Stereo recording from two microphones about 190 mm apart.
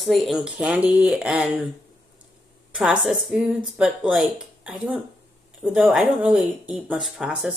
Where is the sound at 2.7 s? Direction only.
5° right (ahead or behind).